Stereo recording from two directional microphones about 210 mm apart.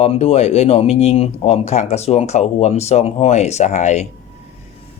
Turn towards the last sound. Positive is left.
turn(degrees=35)  # may be behind; listen again after turning